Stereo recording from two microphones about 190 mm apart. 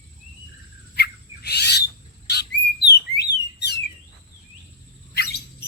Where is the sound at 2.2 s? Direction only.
60° left (ahead or behind).